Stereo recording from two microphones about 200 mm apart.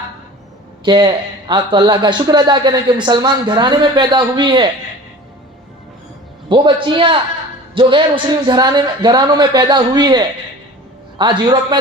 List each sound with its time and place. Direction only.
0.9 s speech: 25° right (ahead or behind)
6.5 s speech: 25° right (ahead or behind)